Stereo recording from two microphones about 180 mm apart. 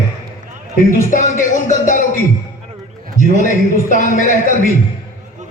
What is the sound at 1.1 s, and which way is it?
Speech, 45° left (ahead or behind).